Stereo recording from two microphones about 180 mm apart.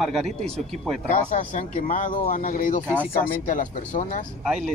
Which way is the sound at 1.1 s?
45° left (ahead or behind).